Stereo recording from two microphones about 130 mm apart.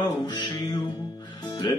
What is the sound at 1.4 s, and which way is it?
Music, 35° left (ahead or behind).